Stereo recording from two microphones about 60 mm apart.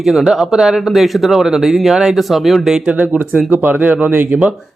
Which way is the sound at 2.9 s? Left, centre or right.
Right.